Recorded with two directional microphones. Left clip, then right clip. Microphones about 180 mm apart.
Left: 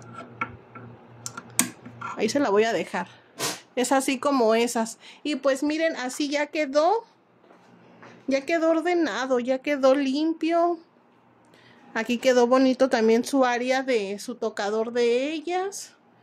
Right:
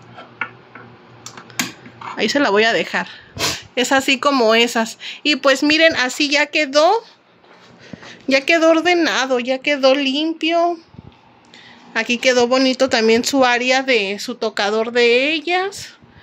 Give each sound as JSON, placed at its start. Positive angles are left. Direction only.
{"t": 2.1, "sound": "speech", "side_deg": 15}
{"t": 8.1, "sound": "speech", "side_deg": 5}
{"t": 11.9, "sound": "speech", "side_deg": 30}